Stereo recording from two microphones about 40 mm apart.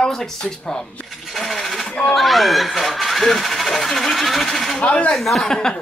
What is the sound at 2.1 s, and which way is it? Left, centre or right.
Speech, centre.